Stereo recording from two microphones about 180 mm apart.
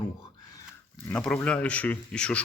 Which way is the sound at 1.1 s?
5° left (ahead or behind).